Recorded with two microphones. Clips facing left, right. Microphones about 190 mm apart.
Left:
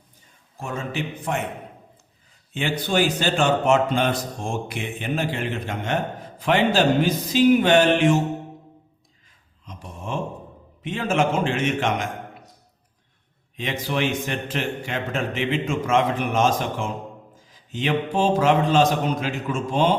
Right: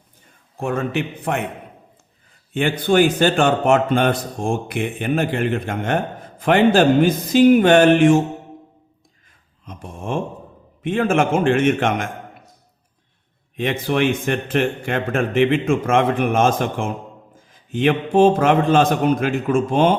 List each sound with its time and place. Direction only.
0.5 s a man's voice: 60° right (ahead or behind)
2.5 s a man's voice: 55° right (ahead or behind)
9.6 s a sound: 50° right (ahead or behind)
10.8 s a man's voice: 55° right (ahead or behind)
13.6 s a man's voice: 55° right (ahead or behind)